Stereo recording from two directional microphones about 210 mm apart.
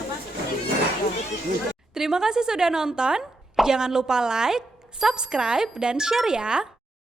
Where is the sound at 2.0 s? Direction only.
Centre (ahead or behind).